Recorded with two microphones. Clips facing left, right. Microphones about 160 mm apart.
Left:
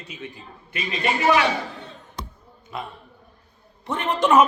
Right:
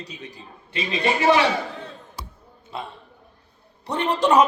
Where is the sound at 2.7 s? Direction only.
30° right (ahead or behind).